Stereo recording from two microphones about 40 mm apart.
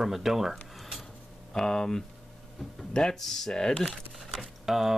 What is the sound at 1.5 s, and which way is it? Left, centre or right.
Speech, centre.